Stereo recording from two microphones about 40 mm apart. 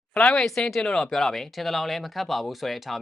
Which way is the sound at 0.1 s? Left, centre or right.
Left.